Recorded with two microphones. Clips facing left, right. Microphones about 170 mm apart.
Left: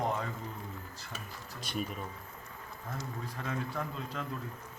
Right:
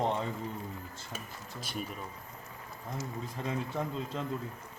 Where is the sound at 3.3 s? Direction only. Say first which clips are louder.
Right 3 dB; 25° right (ahead or behind).